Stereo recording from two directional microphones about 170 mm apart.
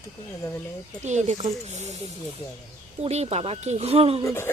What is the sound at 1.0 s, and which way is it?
Speech, 45° right (ahead or behind).